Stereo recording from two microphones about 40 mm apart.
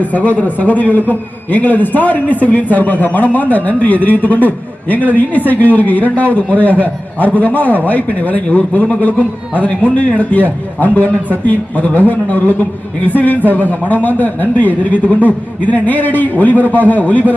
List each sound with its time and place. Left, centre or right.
0.0 s a man's voice: left